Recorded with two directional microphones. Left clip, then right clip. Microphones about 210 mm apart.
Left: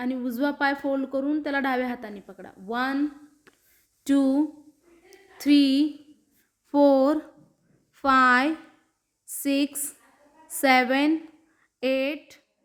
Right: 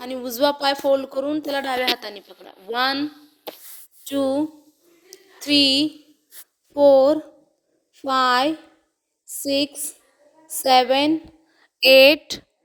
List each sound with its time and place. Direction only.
0.0 s a woman's voice: 5° right (ahead or behind)
4.1 s a woman's voice: centre (ahead or behind)
5.1 s a sound: centre (ahead or behind)
6.7 s a woman's voice: 5° right (ahead or behind)
11.5 s speech: 30° right (ahead or behind)